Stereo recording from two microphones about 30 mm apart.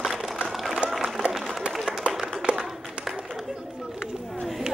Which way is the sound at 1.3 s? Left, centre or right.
Centre.